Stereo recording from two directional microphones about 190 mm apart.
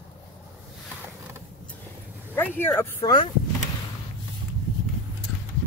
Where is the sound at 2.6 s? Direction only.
10° left (ahead or behind).